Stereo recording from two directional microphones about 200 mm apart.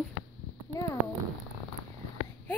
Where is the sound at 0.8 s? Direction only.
15° left (ahead or behind).